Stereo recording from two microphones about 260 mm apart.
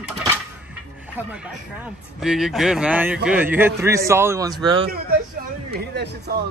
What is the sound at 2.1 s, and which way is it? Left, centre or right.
A man's voice, centre.